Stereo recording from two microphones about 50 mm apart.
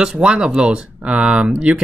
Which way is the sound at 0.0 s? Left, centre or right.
Centre.